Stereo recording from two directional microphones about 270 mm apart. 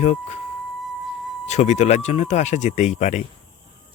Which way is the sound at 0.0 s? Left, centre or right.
Left.